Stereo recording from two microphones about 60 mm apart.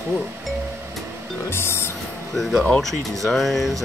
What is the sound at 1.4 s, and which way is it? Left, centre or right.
Music, left.